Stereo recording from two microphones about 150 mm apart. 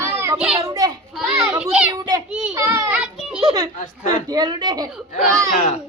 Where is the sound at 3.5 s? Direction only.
25° right (ahead or behind).